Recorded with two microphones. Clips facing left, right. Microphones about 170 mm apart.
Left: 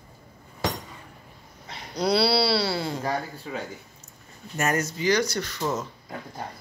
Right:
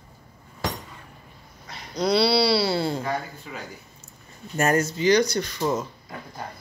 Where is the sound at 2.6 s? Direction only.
25° right (ahead or behind).